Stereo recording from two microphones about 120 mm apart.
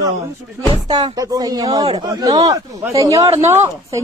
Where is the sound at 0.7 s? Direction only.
35° right (ahead or behind).